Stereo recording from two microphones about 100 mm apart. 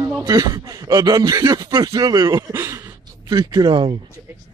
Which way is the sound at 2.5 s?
30° right (ahead or behind).